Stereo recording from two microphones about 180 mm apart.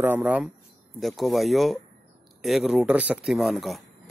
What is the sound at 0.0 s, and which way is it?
A man's voice, 10° right (ahead or behind).